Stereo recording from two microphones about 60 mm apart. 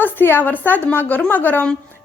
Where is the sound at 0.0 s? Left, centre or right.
Left.